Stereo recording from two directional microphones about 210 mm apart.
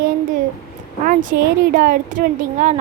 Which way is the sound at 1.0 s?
40° right (ahead or behind).